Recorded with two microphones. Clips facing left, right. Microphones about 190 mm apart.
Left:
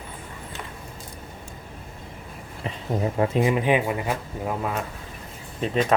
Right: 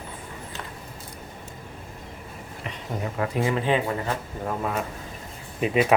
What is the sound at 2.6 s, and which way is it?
Speech, 25° left (ahead or behind).